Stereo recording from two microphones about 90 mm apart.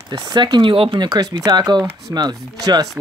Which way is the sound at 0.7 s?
90° right.